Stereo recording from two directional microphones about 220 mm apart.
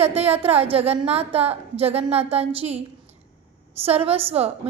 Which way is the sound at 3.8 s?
25° right (ahead or behind).